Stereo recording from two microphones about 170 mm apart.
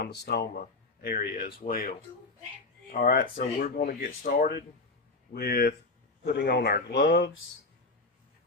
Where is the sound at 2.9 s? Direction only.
55° left (ahead or behind).